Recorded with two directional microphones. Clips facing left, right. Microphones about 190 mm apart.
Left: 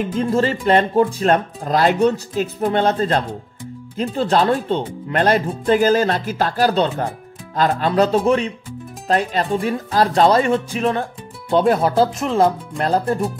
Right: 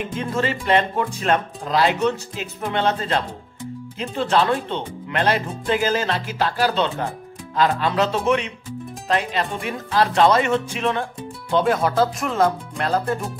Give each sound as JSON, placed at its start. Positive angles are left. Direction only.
{"t": 0.2, "sound": "speech", "side_deg": 35}